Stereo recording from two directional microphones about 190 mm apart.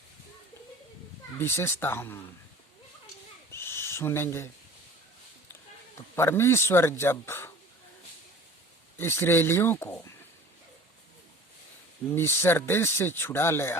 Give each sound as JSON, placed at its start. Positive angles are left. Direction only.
{"t": 1.4, "sound": "speech", "side_deg": 15}
{"t": 3.5, "sound": "owl", "side_deg": 15}
{"t": 6.1, "sound": "speech", "side_deg": 15}
{"t": 9.0, "sound": "speech", "side_deg": 10}
{"t": 12.1, "sound": "speech", "side_deg": 10}